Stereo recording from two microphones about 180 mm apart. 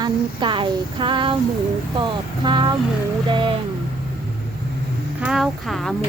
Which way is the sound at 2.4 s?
25° right (ahead or behind).